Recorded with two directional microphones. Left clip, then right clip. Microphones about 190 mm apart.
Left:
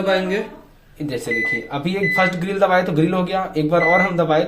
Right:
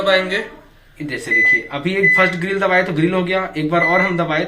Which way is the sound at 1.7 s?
45° left (ahead or behind).